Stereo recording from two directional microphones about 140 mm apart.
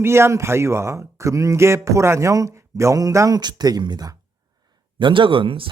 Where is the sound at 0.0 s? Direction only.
20° right (ahead or behind).